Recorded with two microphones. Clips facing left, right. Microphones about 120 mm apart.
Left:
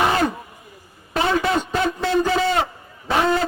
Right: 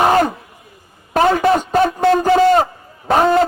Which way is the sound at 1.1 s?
45° right (ahead or behind).